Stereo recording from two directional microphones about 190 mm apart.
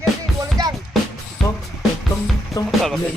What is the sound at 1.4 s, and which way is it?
Music, centre (ahead or behind).